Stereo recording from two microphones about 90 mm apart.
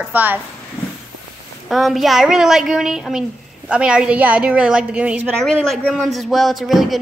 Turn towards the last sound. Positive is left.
turn(degrees=0)  # may be behind; listen again after turning